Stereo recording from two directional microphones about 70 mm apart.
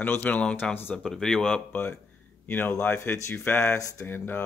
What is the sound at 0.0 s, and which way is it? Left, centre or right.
Speech, left.